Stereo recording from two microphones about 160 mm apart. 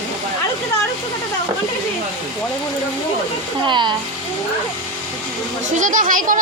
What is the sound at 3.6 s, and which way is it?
Speech, 30° right (ahead or behind).